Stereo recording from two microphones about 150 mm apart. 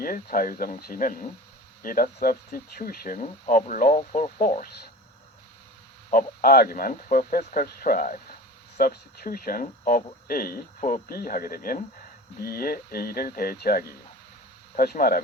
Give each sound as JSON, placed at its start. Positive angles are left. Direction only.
{"t": 0.0, "sound": "speech", "side_deg": 70}
{"t": 2.2, "sound": "speech", "side_deg": 80}
{"t": 6.1, "sound": "speech", "side_deg": 75}
{"t": 8.8, "sound": "speech", "side_deg": 75}
{"t": 12.4, "sound": "speech", "side_deg": 90}